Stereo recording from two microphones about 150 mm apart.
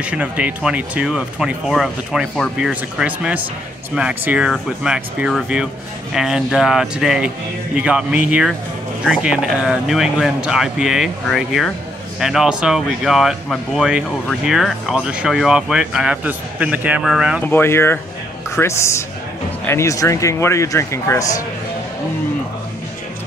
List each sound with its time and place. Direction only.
0.0 s speech: 10° right (ahead or behind)
17.5 s speech: 15° left (ahead or behind)